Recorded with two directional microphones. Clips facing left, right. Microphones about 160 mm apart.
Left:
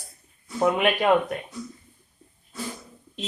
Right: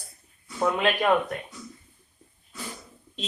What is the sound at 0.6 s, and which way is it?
Speech, 20° left (ahead or behind).